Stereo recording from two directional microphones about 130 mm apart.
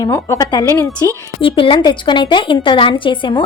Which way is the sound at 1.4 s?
40° left (ahead or behind).